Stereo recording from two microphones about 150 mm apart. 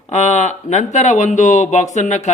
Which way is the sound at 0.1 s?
50° left (ahead or behind).